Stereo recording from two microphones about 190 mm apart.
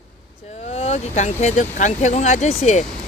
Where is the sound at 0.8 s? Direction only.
35° left (ahead or behind).